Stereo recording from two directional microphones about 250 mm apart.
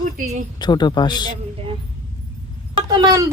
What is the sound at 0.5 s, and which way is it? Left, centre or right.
Speech, centre.